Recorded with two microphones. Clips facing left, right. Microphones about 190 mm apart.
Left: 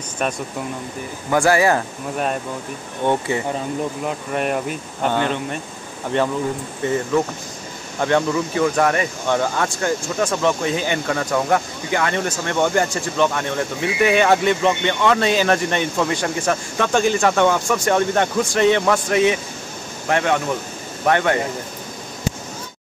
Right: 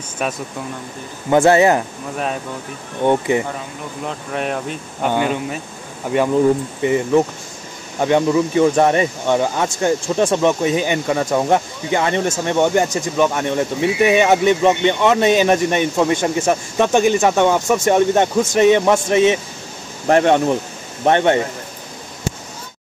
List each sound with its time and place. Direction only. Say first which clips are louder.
0.2 s speech: even; 5° right (ahead or behind)
1.3 s speech: right 4 dB; 20° right (ahead or behind)
3.1 s speech: right 4 dB; 20° right (ahead or behind)
4.1 s speech: right 2 dB; centre (ahead or behind)
5.0 s speech: right 2 dB; 10° right (ahead or behind)
20.1 s speech: right 6 dB; 35° right (ahead or behind)
21.0 s speech: right 4 dB; 25° right (ahead or behind)